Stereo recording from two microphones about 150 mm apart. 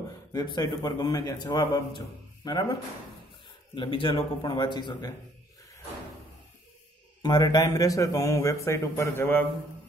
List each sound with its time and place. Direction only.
0.3 s speech: 25° left (ahead or behind)
3.7 s speech: 35° left (ahead or behind)
7.2 s speech: 25° left (ahead or behind)